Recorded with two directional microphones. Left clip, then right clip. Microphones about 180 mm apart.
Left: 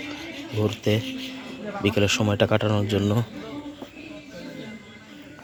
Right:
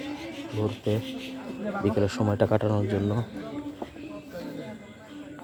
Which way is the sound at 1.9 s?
5° left (ahead or behind).